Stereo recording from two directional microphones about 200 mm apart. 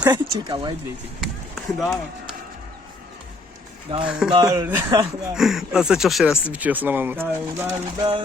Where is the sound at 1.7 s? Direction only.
Centre (ahead or behind).